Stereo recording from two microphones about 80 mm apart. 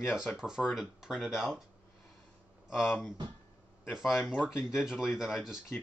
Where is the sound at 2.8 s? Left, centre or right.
Left.